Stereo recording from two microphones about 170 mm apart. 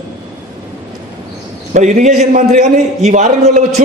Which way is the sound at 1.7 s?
45° right (ahead or behind).